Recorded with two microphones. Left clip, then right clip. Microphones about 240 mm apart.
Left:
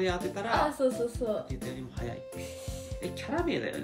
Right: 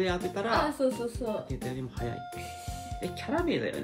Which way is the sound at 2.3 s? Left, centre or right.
Centre.